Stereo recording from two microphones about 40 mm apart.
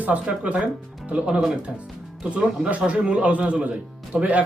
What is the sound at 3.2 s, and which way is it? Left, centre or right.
Speech, right.